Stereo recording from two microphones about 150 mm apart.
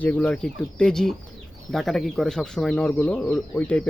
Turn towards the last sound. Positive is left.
turn(degrees=10)  # may be behind; listen again after turning